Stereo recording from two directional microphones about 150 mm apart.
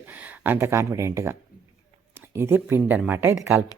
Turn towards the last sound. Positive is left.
turn(degrees=-10)  # may be behind; listen again after turning